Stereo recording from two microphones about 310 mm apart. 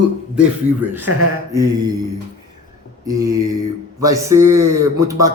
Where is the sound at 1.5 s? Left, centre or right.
Centre.